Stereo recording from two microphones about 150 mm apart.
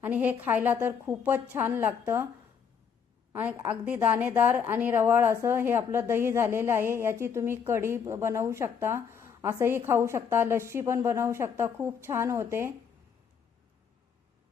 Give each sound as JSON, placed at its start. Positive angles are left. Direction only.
{"t": 0.0, "sound": "a woman's voice", "side_deg": -10}
{"t": 3.3, "sound": "a woman's voice", "side_deg": -10}